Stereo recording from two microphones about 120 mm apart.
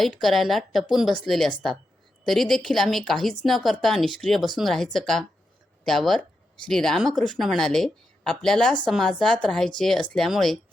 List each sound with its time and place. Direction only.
0.0 s speech: centre (ahead or behind)